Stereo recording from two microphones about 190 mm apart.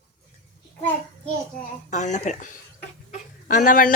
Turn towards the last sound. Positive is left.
turn(degrees=45)  # may be behind; listen again after turning